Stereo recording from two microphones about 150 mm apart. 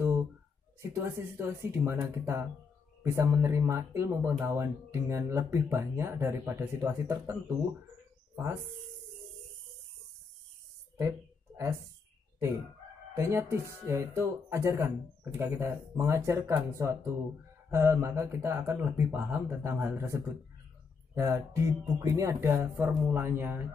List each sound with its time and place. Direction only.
0.9 s speech: 20° right (ahead or behind)
11.0 s a sound: 20° right (ahead or behind)
13.1 s speech: 20° right (ahead or behind)